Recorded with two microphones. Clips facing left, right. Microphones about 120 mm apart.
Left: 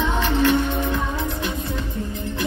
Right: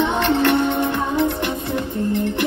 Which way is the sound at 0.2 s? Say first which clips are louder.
Right 1 dB; 65° right (ahead or behind).